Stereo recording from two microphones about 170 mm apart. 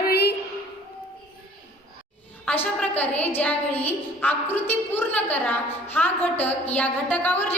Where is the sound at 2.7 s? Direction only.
10° left (ahead or behind).